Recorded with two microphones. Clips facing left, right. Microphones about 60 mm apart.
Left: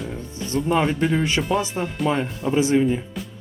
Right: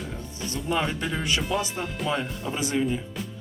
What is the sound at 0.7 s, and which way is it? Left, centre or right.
Speech, left.